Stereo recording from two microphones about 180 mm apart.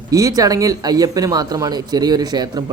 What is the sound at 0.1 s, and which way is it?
Speech, 20° right (ahead or behind).